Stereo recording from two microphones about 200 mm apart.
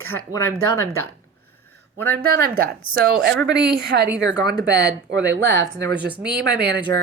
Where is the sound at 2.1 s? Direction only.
50° right (ahead or behind).